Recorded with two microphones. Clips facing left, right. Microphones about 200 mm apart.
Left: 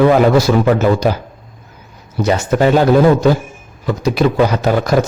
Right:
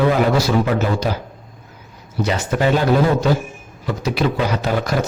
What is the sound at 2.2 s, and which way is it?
A man's voice, 45° left (ahead or behind).